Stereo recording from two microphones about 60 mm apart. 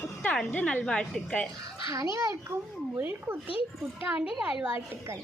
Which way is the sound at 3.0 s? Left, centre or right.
Right.